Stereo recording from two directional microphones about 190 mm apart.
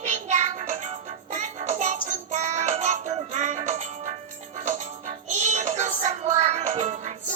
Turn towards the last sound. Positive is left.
turn(degrees=-35)  # may be behind; listen again after turning